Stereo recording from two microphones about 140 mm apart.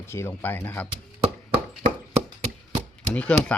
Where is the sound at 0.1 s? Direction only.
15° left (ahead or behind).